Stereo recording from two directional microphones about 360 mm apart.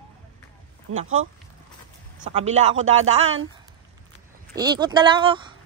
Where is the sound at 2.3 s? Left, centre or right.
Centre.